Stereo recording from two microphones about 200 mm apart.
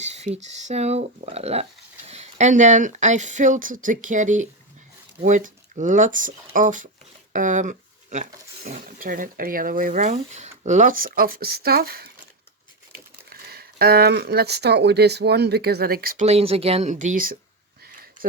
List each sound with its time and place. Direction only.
0.0 s speech: 35° right (ahead or behind); by 12.1 s 50° right (ahead or behind)
13.3 s speech: 50° right (ahead or behind)
16.2 s speech: 30° right (ahead or behind)
18.2 s a sound: 45° right (ahead or behind)